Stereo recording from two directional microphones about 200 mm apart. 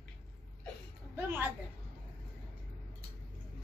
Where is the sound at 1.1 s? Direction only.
10° right (ahead or behind).